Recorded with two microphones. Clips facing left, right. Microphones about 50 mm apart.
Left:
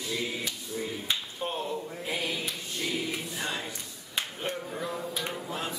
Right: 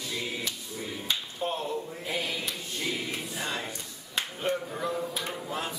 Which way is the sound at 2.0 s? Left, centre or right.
Centre.